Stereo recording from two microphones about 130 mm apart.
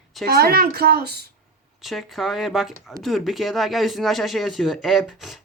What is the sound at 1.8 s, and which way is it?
Speech, centre (ahead or behind).